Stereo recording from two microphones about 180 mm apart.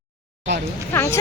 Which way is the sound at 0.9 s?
15° left (ahead or behind).